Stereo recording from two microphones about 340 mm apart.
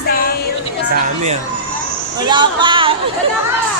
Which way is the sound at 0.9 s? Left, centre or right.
Centre.